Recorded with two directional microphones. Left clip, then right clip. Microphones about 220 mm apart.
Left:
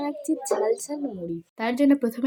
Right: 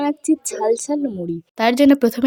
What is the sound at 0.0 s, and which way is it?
A woman's voice, 40° right (ahead or behind).